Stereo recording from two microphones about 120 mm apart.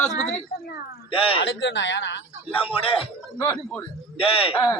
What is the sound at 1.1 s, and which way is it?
Speech, 50° left (ahead or behind).